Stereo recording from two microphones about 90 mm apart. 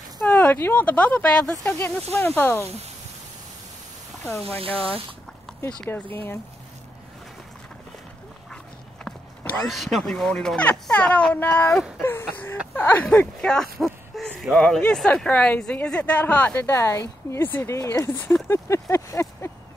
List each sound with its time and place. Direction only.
0.2 s a sound: 15° left (ahead or behind)
0.8 s speech: 15° left (ahead or behind)
4.1 s a sound: 5° left (ahead or behind)
4.6 s speech: 90° right
5.5 s run: 5° left (ahead or behind)
5.9 s speech: 25° left (ahead or behind)
9.7 s speech: centre (ahead or behind); by 11.8 s 20° left (ahead or behind)
12.0 s a sound: 25° left (ahead or behind)
12.7 s speech: 20° left (ahead or behind)
17.7 s speech: 35° left (ahead or behind)